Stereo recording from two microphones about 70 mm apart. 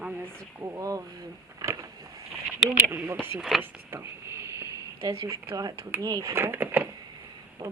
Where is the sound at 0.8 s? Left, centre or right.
Right.